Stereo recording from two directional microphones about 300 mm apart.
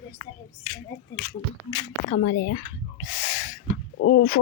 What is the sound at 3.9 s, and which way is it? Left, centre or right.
Speech, left.